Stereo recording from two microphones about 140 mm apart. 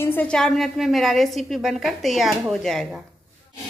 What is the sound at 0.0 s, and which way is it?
A woman's voice, 10° left (ahead or behind).